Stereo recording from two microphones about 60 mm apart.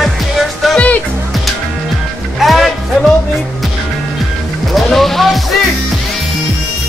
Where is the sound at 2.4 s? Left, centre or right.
Centre.